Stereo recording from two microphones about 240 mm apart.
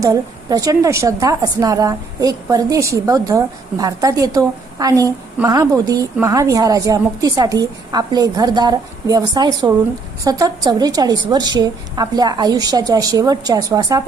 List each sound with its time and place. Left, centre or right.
0.0 s a woman's voice: centre